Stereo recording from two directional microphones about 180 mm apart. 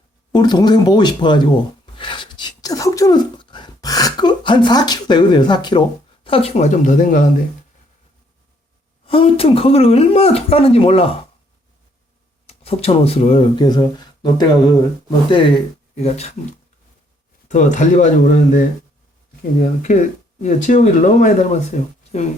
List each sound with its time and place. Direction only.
0.3 s speech: 25° left (ahead or behind)
2.0 s a sound: 25° left (ahead or behind)
6.2 s speech: 30° left (ahead or behind)
9.0 s speech: 30° left (ahead or behind)
12.5 s speech: 35° left (ahead or behind)
17.5 s speech: 45° left (ahead or behind)